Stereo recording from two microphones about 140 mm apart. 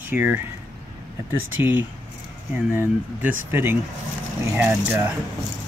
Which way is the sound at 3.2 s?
15° right (ahead or behind).